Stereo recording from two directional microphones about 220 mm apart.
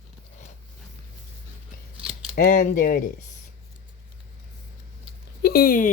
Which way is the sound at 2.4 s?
35° left (ahead or behind).